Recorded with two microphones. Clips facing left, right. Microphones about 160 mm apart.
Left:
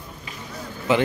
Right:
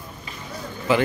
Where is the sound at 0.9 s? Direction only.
20° left (ahead or behind).